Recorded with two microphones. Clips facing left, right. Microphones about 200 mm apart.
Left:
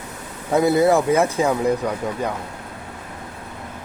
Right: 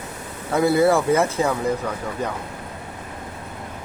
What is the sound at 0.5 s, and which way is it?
Speech, 20° left (ahead or behind).